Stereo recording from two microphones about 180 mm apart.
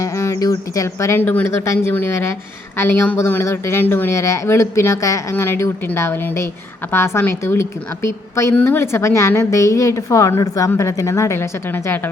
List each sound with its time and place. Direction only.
0.0 s a woman's voice: 15° left (ahead or behind)